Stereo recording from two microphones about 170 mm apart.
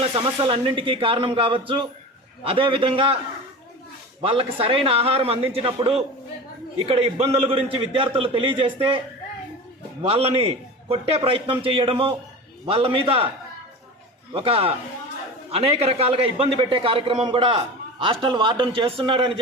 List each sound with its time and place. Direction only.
0.0 s a man's voice: 35° right (ahead or behind)
4.2 s a man's voice: 30° right (ahead or behind)
10.0 s a man's voice: 35° right (ahead or behind)
14.3 s a man's voice: 35° right (ahead or behind)